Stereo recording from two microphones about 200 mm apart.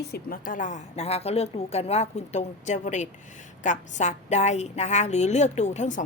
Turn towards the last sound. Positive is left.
turn(degrees=35)  # may be behind; listen again after turning